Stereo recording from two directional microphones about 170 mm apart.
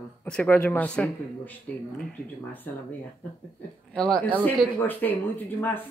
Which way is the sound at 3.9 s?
5° left (ahead or behind).